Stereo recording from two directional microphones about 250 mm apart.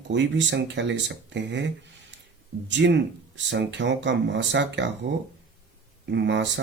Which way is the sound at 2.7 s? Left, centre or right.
Right.